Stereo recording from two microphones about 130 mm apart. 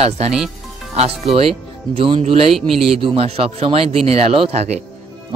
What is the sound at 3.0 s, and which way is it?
Speech, 45° right (ahead or behind).